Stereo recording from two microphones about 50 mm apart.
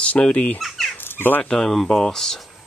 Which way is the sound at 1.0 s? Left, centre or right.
Left.